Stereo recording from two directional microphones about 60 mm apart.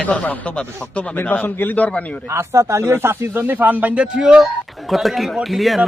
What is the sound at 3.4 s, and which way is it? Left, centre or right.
Speech, right.